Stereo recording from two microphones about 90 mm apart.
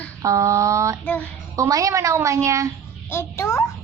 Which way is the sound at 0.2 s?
35° right (ahead or behind).